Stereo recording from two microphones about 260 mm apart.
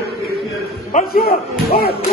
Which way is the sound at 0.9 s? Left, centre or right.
Left.